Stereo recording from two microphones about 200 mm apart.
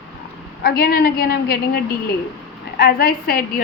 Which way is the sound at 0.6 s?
50° left (ahead or behind).